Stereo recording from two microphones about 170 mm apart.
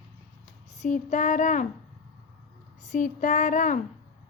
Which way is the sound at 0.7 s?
45° left (ahead or behind).